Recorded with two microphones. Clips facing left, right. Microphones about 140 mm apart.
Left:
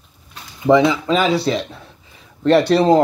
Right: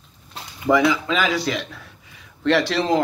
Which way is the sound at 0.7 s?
25° left (ahead or behind).